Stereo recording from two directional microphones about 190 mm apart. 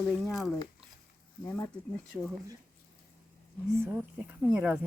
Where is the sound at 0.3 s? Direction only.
Centre (ahead or behind).